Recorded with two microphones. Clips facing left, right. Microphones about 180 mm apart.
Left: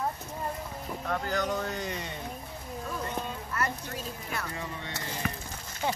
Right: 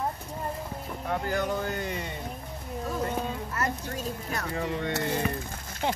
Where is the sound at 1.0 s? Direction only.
15° right (ahead or behind).